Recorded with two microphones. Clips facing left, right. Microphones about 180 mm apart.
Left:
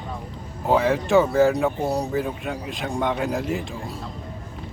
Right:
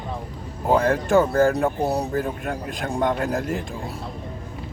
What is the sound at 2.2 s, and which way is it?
Speech, 50° right (ahead or behind).